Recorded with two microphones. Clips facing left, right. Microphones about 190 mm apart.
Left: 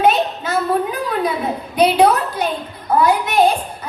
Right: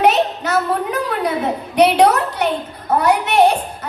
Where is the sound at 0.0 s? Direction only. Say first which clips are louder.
Right 1 dB; 75° right (ahead or behind).